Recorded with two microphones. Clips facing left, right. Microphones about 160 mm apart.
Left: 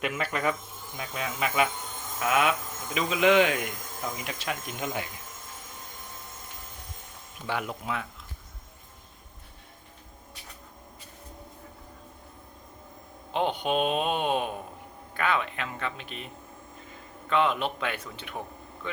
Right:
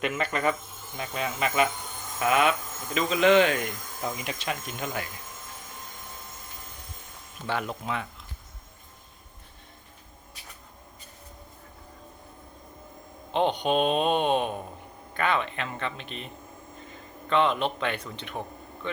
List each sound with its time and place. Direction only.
0.0 s speech: 5° left (ahead or behind)
4.6 s speech: 15° left (ahead or behind)
7.4 s speech: 10° left (ahead or behind)
13.3 s a man's voice: 5° left (ahead or behind)